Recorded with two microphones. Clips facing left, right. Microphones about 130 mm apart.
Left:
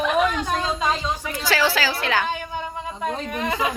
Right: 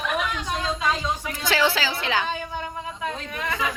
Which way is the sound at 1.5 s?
20° right (ahead or behind).